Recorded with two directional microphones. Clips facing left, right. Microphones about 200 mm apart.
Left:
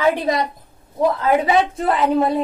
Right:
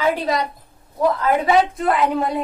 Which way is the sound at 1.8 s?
30° left (ahead or behind).